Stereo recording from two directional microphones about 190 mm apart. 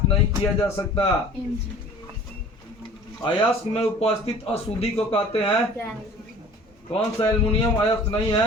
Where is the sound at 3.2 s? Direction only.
30° left (ahead or behind).